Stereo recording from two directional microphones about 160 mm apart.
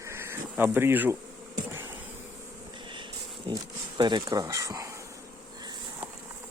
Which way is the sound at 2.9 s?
30° right (ahead or behind).